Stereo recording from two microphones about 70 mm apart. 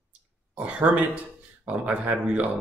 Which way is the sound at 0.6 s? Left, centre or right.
Centre.